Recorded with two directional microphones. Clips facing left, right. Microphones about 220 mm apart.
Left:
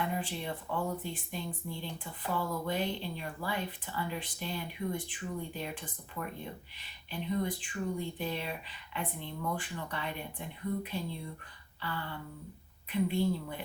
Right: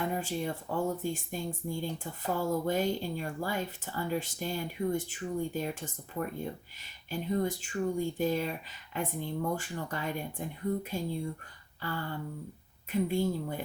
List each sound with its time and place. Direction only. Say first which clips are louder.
0.0 s speech: right 3 dB; 45° right (ahead or behind)